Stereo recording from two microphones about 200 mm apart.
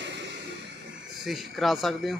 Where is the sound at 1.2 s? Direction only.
Centre (ahead or behind).